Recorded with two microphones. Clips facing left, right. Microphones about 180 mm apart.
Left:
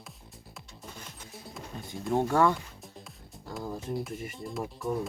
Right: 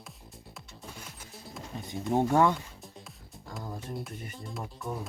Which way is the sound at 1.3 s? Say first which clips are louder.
Right 1 dB; centre (ahead or behind).